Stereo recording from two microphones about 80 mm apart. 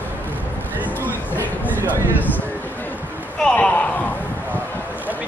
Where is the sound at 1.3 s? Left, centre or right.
Left.